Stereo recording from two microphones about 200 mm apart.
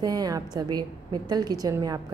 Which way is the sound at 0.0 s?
20° right (ahead or behind).